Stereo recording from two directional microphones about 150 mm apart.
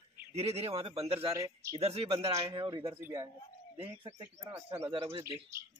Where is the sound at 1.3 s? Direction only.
20° right (ahead or behind).